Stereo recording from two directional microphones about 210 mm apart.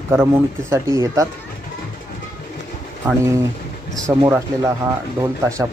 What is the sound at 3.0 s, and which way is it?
Speech, 15° right (ahead or behind).